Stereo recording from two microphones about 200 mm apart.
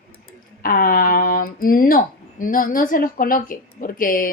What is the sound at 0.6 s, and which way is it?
A woman's voice, 45° left (ahead or behind).